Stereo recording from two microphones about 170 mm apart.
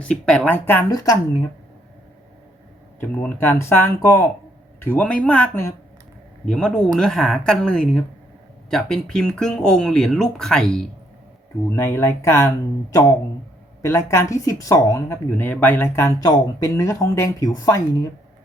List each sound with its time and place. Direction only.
0.0 s speech: 5° left (ahead or behind)
3.0 s speech: 10° left (ahead or behind)
11.7 s speech: 15° left (ahead or behind)